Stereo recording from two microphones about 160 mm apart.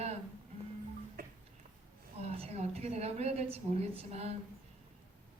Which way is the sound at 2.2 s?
40° right (ahead or behind).